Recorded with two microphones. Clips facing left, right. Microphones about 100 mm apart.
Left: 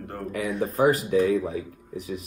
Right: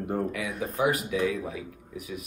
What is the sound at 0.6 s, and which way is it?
Speech, 40° left (ahead or behind).